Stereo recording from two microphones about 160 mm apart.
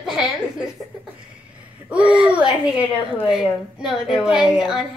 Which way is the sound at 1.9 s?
5° right (ahead or behind).